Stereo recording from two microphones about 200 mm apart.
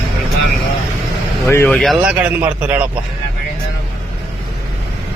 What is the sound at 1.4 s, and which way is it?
Speech, 10° left (ahead or behind).